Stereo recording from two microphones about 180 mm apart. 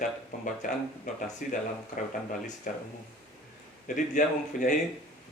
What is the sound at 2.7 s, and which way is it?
Speech, 50° left (ahead or behind).